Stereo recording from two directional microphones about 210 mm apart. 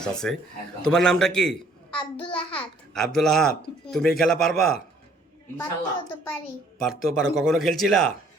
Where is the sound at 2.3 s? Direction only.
5° left (ahead or behind).